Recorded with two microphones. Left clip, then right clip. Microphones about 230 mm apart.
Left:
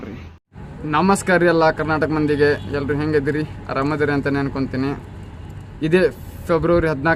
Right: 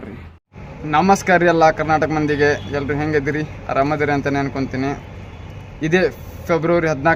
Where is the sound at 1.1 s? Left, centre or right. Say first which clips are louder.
Right 1 dB; centre.